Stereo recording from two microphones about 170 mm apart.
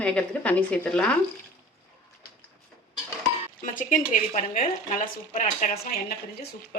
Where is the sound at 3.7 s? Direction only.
50° left (ahead or behind).